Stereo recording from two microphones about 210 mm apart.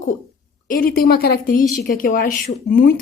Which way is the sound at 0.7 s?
45° left (ahead or behind).